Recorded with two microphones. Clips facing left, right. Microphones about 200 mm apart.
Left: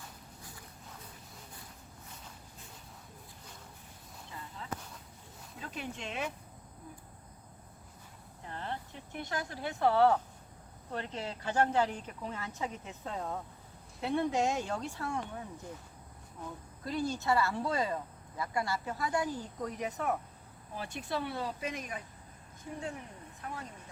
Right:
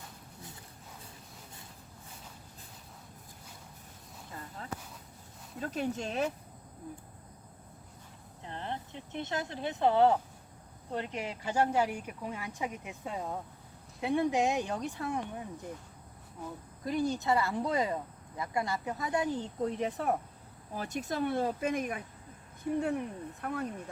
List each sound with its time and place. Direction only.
4.3 s a sound: 45° right (ahead or behind)
5.5 s speech: 40° right (ahead or behind)
8.4 s speech: 20° right (ahead or behind)
16.8 s speech: 15° right (ahead or behind); by 23.6 s 60° right (ahead or behind)